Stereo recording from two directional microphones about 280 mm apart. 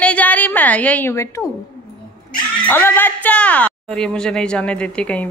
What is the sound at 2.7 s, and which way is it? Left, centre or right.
Speech, centre.